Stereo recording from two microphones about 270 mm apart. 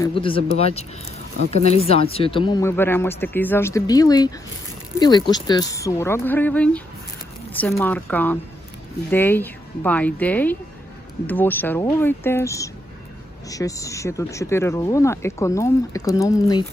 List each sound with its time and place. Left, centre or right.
0.0 s speech: centre